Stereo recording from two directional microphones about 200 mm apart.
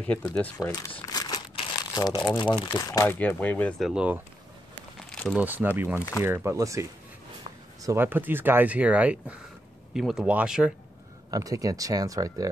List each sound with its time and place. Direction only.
0.2 s speech: 15° left (ahead or behind)
3.9 s speech: 5° right (ahead or behind)
5.9 s speech: 15° left (ahead or behind)
6.2 s speech: 15° right (ahead or behind)
11.2 s speech: 15° right (ahead or behind)